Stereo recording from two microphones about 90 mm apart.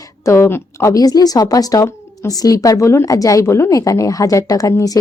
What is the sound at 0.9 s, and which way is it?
A woman's voice, 45° left (ahead or behind).